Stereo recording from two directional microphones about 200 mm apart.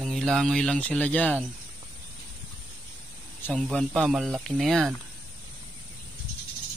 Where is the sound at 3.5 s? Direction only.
Centre (ahead or behind).